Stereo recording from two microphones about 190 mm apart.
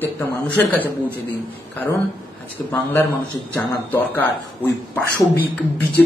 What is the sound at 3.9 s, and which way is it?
Speech, 10° left (ahead or behind).